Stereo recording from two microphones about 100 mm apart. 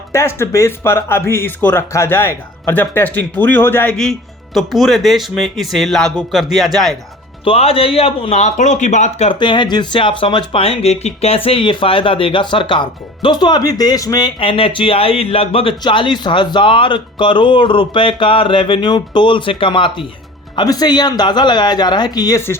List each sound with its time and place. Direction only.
0.1 s speech: 25° left (ahead or behind)
3.9 s speech: 5° left (ahead or behind)
7.4 s speech: 75° left (ahead or behind)
9.1 s speech: 90° left
9.4 s speech: 50° left (ahead or behind)
14.3 s speech: 65° left (ahead or behind)
15.8 s speech: 55° left (ahead or behind)
20.6 s speech: 40° left (ahead or behind)